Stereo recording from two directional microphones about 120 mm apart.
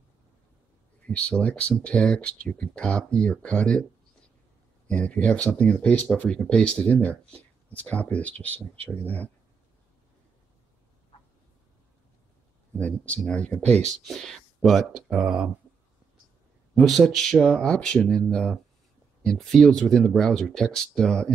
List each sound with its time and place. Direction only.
1.0 s speech: 10° left (ahead or behind)
4.8 s speech: 10° left (ahead or behind)
12.7 s speech: 10° left (ahead or behind)
13.7 s speech: 65° right (ahead or behind)
14.0 s speech: 5° left (ahead or behind)
16.7 s speech: centre (ahead or behind)